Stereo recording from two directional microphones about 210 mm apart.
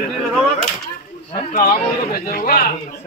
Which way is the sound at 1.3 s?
40° left (ahead or behind).